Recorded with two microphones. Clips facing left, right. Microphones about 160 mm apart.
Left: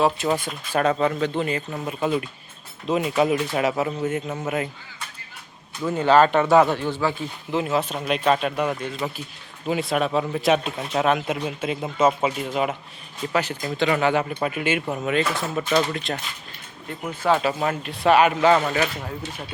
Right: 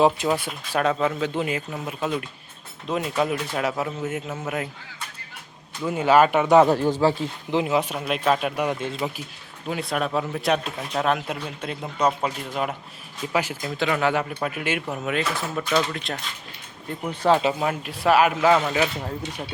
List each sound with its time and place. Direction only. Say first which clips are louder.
0.3 s speech: left 1 dB; centre (ahead or behind)
5.8 s speech: left 1 dB; 10° right (ahead or behind)
6.7 s speech: right 4 dB; 40° right (ahead or behind)
7.5 s speech: right 1 dB; 15° right (ahead or behind)
8.0 s speech: left 1 dB; centre (ahead or behind)
8.7 s speech: right 1 dB; 25° right (ahead or behind)
9.6 s speech: left 3 dB; centre (ahead or behind)
13.2 s speech: left 1 dB; 10° right (ahead or behind)
17.2 s speech: right 1 dB; 20° right (ahead or behind)
17.6 s speech: left 1 dB; 5° right (ahead or behind)